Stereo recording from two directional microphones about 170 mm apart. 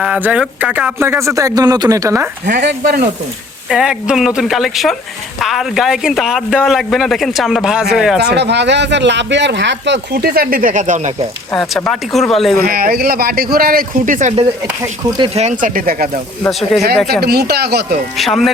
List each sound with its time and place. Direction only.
0.0 s speech: 5° right (ahead or behind)
3.7 s speech: 5° right (ahead or behind)
8.2 s speech: 80° right; by 11.1 s 45° right (ahead or behind)
11.7 s speech: centre (ahead or behind)
12.5 s speech: 60° right (ahead or behind)
16.5 s speech: centre (ahead or behind)
17.1 s speech: 70° right (ahead or behind)
18.2 s speech: centre (ahead or behind)